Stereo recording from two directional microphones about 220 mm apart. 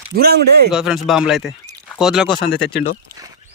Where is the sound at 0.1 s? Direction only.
45° right (ahead or behind).